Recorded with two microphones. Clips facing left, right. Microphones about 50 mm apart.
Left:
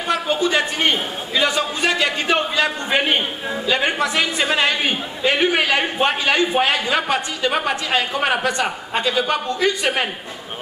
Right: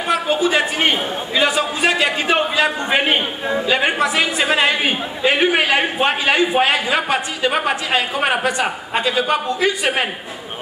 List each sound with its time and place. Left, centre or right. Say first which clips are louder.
0.1 s a man's voice: right 2 dB; centre